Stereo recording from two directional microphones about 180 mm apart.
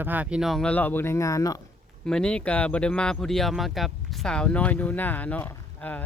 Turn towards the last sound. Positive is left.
turn(degrees=10)  # may be behind; listen again after turning